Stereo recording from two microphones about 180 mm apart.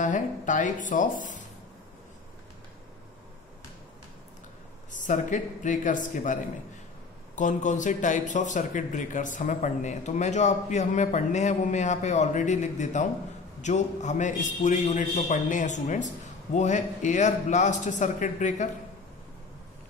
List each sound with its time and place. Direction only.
0.0 s a man's voice: 45° left (ahead or behind)
4.9 s a man's voice: 45° left (ahead or behind)